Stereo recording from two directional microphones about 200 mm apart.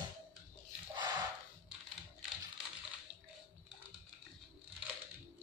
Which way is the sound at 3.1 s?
10° right (ahead or behind).